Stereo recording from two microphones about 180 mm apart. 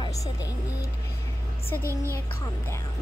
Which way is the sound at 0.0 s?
20° left (ahead or behind).